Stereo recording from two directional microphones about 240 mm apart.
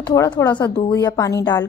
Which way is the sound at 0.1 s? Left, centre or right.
Centre.